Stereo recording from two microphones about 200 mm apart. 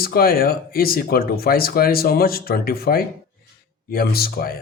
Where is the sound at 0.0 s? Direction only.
50° left (ahead or behind).